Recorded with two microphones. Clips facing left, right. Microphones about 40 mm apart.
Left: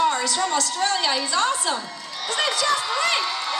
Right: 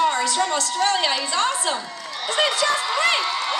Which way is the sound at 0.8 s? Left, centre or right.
Centre.